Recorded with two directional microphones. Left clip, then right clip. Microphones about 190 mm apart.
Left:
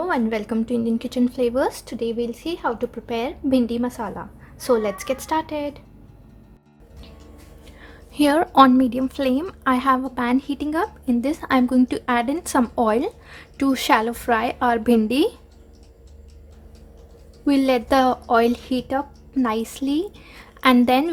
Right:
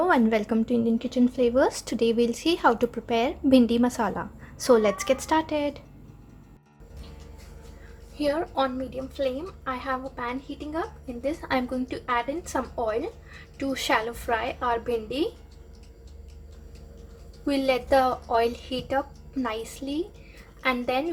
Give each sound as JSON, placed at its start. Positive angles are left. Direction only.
{"t": 0.0, "sound": "speech", "side_deg": -5}
{"t": 8.2, "sound": "a woman's voice", "side_deg": 55}
{"t": 17.4, "sound": "a woman's voice", "side_deg": 35}